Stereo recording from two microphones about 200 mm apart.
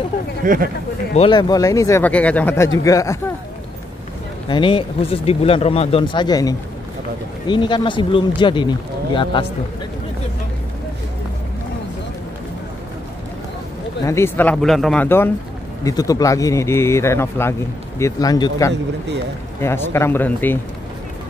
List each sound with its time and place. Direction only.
0.4 s speech: 45° right (ahead or behind)
1.1 s speech: 25° left (ahead or behind)
4.5 s speech: 25° left (ahead or behind)
14.0 s speech: 10° left (ahead or behind)